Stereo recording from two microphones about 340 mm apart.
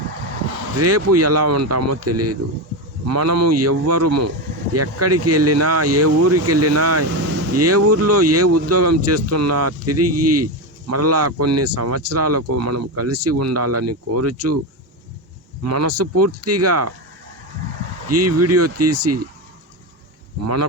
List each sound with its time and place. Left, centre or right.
0.8 s speech: right
15.6 s speech: right
18.1 s speech: right